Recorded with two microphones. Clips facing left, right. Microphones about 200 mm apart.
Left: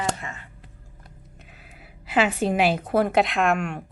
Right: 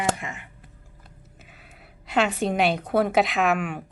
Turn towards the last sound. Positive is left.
turn(degrees=-5)  # may be behind; listen again after turning